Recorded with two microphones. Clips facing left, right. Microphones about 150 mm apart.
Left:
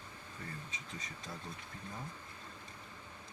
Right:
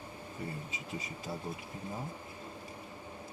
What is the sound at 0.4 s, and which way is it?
Speech, 10° right (ahead or behind).